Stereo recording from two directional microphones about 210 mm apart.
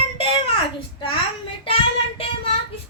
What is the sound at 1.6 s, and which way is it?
Speech, 25° left (ahead or behind).